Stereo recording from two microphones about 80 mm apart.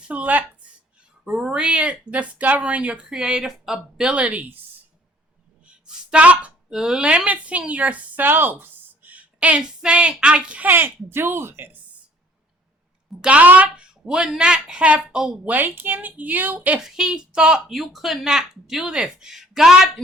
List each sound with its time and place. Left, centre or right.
0.1 s a woman's voice: centre
1.2 s speech: centre
5.6 s a woman's voice: centre
10.7 s speech: right
13.2 s speech: centre
15.5 s a woman's voice: right
16.8 s speech: centre